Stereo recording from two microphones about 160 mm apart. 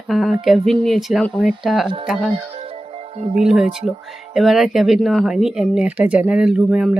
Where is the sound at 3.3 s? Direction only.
5° right (ahead or behind).